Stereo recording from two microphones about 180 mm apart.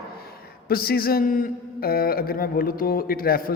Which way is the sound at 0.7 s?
60° left (ahead or behind).